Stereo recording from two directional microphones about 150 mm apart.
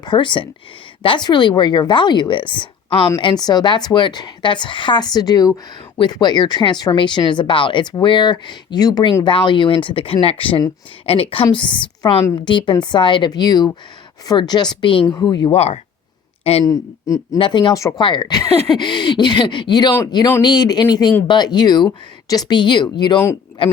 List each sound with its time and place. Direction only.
0.0 s a woman's voice: 30° left (ahead or behind)
15.5 s speech: 45° left (ahead or behind)
16.6 s a woman's voice: 25° left (ahead or behind)